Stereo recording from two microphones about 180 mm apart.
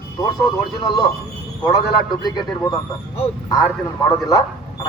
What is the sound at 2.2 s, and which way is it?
Speech, 25° left (ahead or behind).